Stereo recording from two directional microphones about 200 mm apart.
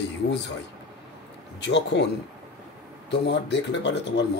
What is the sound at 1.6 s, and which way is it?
Speech, 60° left (ahead or behind).